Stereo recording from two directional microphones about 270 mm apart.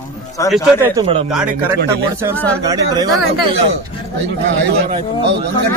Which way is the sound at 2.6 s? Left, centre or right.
Centre.